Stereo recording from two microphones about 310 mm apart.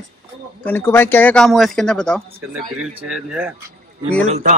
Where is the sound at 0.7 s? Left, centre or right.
Centre.